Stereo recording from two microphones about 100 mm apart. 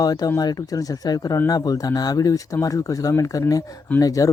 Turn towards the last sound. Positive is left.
turn(degrees=35)  # may be behind; listen again after turning